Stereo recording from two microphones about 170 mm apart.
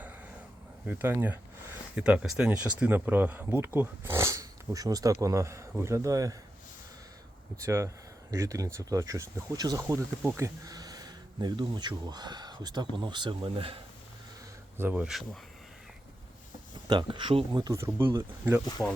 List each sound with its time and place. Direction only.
0.9 s speech: 10° right (ahead or behind)
7.6 s speech: 15° right (ahead or behind)
14.8 s speech: 10° right (ahead or behind)
16.9 s speech: 30° right (ahead or behind)